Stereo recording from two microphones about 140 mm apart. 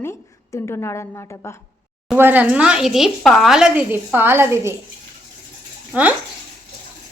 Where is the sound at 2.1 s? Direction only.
15° right (ahead or behind).